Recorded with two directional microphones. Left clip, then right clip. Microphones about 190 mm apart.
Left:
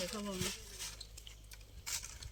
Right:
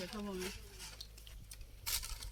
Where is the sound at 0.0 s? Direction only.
40° left (ahead or behind).